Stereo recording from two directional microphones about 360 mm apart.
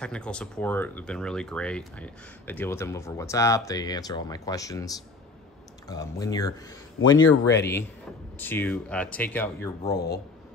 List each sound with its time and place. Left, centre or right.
0.0 s speech: centre
7.2 s speech: left
8.4 s speech: centre
9.9 s speech: left